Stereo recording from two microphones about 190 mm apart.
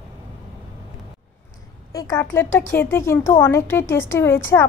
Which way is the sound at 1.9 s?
20° left (ahead or behind).